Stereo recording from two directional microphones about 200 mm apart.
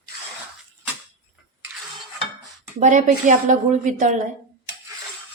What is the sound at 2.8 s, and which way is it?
A woman's voice, 40° right (ahead or behind).